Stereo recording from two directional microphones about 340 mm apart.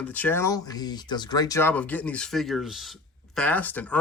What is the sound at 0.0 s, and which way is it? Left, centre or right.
Speech, centre.